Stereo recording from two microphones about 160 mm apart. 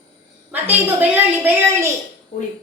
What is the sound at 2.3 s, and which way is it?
Speech, 55° left (ahead or behind).